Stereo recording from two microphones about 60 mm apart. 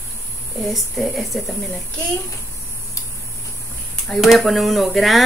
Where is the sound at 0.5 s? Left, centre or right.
Centre.